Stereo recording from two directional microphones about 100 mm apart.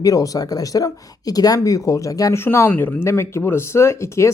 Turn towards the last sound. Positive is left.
turn(degrees=30)  # may be behind; listen again after turning